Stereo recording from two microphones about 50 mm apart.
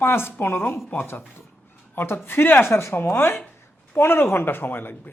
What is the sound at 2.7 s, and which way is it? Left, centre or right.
Speech, left.